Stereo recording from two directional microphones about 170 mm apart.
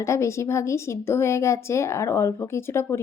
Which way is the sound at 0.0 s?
15° left (ahead or behind).